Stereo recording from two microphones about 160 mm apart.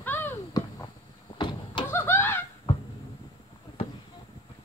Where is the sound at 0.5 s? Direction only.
25° left (ahead or behind).